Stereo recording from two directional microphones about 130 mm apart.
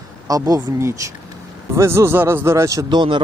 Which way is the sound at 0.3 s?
30° right (ahead or behind).